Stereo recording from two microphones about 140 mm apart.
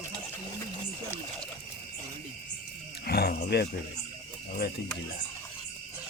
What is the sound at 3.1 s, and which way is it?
Wild animals, 90° left.